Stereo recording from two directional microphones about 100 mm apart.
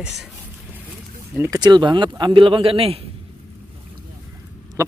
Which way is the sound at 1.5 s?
45° right (ahead or behind).